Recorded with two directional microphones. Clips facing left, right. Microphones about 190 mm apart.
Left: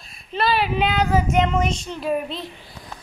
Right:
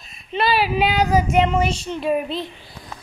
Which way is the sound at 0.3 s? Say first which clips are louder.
Right 2 dB; 5° right (ahead or behind).